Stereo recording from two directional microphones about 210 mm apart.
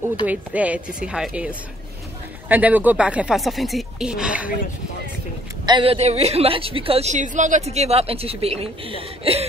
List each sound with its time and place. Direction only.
0.3 s a woman's voice: 5° right (ahead or behind)
5.7 s a woman's voice: 25° right (ahead or behind)